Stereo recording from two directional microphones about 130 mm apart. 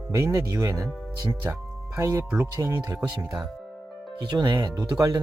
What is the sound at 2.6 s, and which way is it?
Speech, 25° right (ahead or behind).